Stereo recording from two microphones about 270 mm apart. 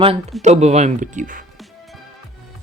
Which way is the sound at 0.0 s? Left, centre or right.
Right.